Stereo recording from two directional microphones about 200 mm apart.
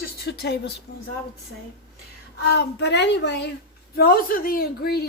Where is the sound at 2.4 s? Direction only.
60° left (ahead or behind).